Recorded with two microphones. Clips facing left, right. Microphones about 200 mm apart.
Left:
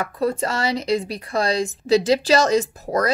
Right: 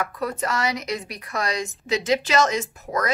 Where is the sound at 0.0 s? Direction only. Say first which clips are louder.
Left 5 dB; 30° left (ahead or behind).